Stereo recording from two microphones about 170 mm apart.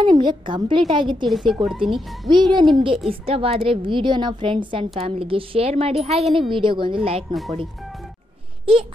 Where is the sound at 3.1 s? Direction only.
35° right (ahead or behind).